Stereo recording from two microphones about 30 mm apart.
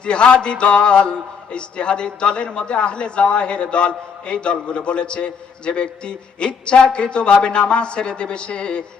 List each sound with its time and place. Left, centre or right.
0.0 s a man's voice: left